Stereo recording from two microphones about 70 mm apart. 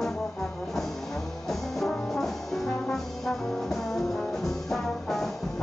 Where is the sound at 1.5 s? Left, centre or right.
Centre.